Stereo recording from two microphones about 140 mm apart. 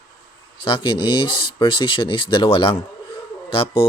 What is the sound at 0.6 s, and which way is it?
A man's voice, 35° left (ahead or behind).